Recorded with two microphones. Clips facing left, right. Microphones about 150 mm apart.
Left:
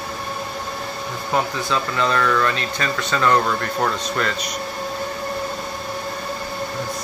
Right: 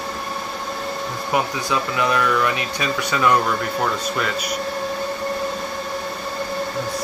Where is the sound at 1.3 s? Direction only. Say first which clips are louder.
Even; 15° right (ahead or behind).